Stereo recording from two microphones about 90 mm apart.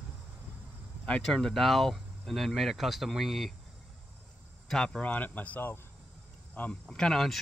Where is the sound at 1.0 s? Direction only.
10° left (ahead or behind).